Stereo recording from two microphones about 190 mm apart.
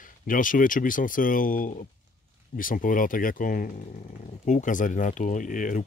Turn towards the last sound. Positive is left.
turn(degrees=45)  # may be behind; listen again after turning